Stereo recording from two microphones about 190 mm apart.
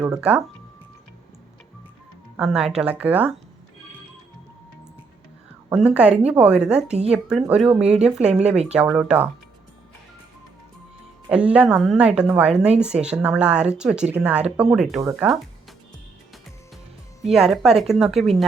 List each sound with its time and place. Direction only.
0.1 s speech: 5° right (ahead or behind)
2.3 s speech: 5° right (ahead or behind)
5.6 s a woman's voice: 5° right (ahead or behind)
8.3 s speech: 35° right (ahead or behind)
8.7 s speech: 5° right (ahead or behind)
11.3 s speech: 5° right (ahead or behind)
12.5 s speech: 35° right (ahead or behind)
12.8 s speech: 5° right (ahead or behind)
17.3 s speech: centre (ahead or behind)